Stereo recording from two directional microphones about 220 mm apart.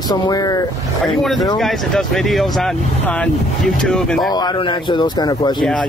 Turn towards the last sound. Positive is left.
turn(degrees=5)  # may be behind; listen again after turning